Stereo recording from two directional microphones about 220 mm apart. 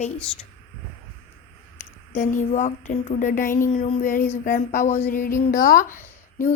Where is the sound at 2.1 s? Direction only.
35° left (ahead or behind).